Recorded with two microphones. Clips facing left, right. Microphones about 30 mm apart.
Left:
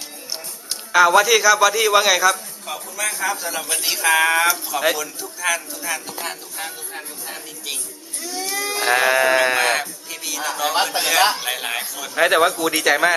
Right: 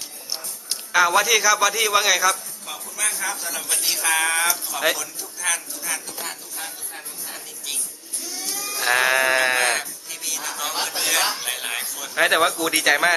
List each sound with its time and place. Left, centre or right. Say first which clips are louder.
0.7 s a man's voice: left 4 dB; centre
8.4 s sheep: left 7 dB; left
8.8 s a man's voice: left 2 dB; centre
12.1 s speech: left 2 dB; centre